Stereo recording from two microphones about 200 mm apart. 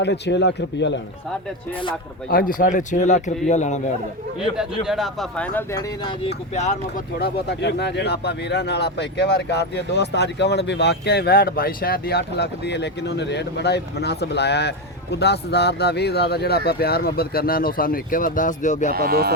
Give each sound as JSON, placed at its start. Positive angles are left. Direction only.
{"t": 0.0, "sound": "speech", "side_deg": 60}
{"t": 2.3, "sound": "a man's voice", "side_deg": 45}
{"t": 4.5, "sound": "a man's voice", "side_deg": 25}
{"t": 4.9, "sound": "speech", "side_deg": 0}
{"t": 6.2, "sound": "a man's voice", "side_deg": 35}
{"t": 7.2, "sound": "speech", "side_deg": 55}
{"t": 18.9, "sound": "speech", "side_deg": -50}